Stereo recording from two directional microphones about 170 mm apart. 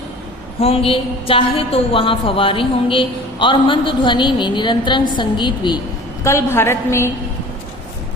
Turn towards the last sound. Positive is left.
turn(degrees=15)  # may be behind; listen again after turning